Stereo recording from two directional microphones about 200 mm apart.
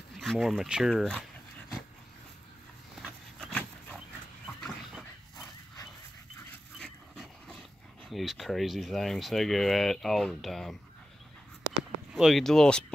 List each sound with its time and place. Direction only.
0.1 s speech: centre (ahead or behind)
3.0 s dog: 5° left (ahead or behind)
6.8 s dog: centre (ahead or behind)
8.1 s speech: centre (ahead or behind)
12.1 s speech: centre (ahead or behind)